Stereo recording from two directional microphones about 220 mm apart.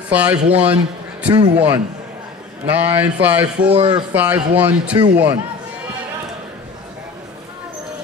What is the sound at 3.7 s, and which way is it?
Speech, 25° right (ahead or behind).